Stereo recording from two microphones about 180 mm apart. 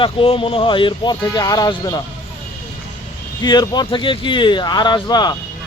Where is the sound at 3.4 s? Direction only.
20° left (ahead or behind).